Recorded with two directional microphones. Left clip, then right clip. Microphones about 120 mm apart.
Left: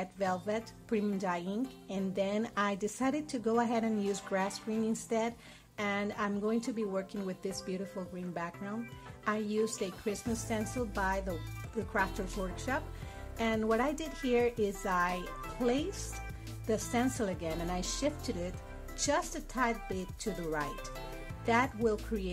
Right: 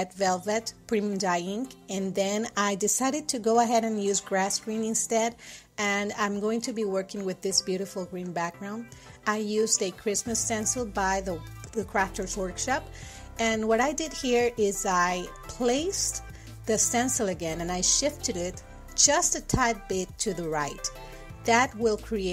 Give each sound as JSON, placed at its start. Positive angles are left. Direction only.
{"t": 0.0, "sound": "a woman's voice", "side_deg": -30}